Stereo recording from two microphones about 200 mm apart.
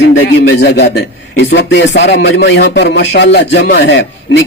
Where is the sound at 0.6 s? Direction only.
55° left (ahead or behind).